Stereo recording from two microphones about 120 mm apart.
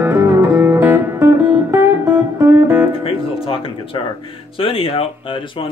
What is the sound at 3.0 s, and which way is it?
Music, 50° left (ahead or behind).